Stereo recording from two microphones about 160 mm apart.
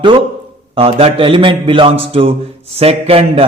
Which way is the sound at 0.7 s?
35° right (ahead or behind).